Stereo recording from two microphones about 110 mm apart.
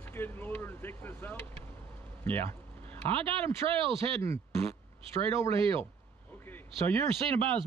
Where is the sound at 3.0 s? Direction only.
55° right (ahead or behind).